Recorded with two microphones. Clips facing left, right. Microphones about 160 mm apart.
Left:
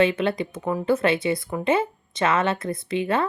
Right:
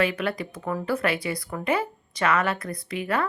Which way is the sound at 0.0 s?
25° left (ahead or behind).